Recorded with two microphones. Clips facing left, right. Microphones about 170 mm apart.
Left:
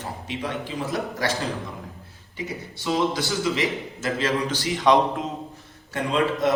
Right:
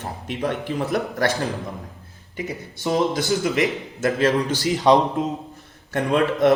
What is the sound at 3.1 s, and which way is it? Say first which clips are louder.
A man's voice: right 3 dB; 50° right (ahead or behind).